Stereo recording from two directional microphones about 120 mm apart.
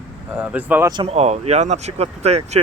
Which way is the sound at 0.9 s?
55° right (ahead or behind).